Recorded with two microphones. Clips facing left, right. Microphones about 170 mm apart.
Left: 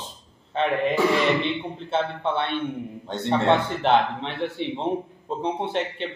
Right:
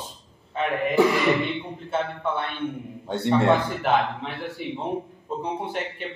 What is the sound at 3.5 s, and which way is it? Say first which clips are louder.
Speech: left 1 dB; 30° left (ahead or behind).